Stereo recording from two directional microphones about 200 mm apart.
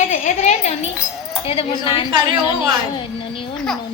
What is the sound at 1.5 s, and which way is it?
Speech, 25° left (ahead or behind).